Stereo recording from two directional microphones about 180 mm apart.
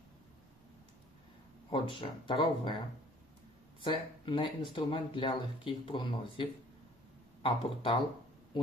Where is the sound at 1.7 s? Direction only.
30° left (ahead or behind).